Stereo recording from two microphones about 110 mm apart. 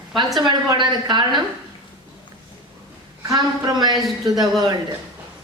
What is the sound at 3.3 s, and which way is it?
Speech, 40° right (ahead or behind).